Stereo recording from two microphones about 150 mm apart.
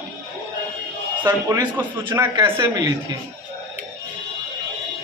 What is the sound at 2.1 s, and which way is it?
Speech, 20° right (ahead or behind).